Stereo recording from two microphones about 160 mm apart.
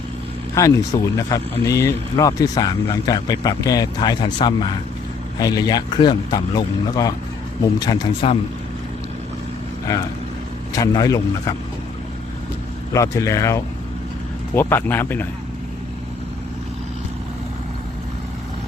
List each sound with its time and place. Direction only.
0.5 s speech: 20° left (ahead or behind)
10.7 s speech: 25° left (ahead or behind)
12.9 s speech: 20° left (ahead or behind)